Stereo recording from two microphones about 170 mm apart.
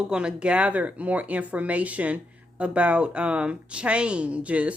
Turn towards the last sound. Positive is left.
turn(degrees=-10)  # may be behind; listen again after turning